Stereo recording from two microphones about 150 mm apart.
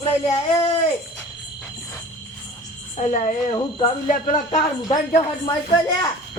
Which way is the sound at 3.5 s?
30° left (ahead or behind).